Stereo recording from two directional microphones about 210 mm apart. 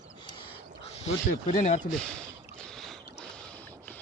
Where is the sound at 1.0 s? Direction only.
35° left (ahead or behind).